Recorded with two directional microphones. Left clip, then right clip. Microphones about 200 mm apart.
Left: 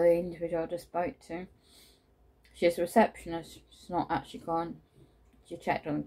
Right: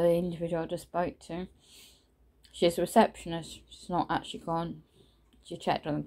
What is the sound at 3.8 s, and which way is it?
Speech, 30° right (ahead or behind).